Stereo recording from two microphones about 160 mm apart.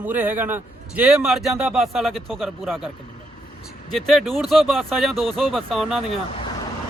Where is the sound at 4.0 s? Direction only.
Centre (ahead or behind).